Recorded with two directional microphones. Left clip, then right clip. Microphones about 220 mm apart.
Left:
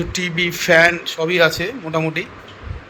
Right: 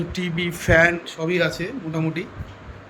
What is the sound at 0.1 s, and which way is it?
Speech, 10° right (ahead or behind).